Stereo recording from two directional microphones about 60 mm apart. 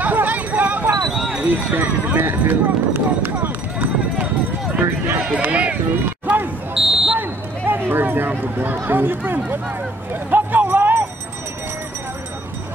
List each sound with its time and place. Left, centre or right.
0.0 s a sound: right
1.1 s clip-clop: centre
1.4 s speech: right
4.2 s clip-clop: right
4.8 s run: right
5.3 s run: right
6.2 s basketball bounce: right
6.7 s smoke detector: centre
7.2 s a sound: right
8.8 s speech: right
10.3 s a sound: right